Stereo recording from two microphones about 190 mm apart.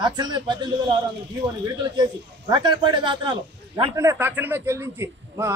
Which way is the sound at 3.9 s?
15° right (ahead or behind).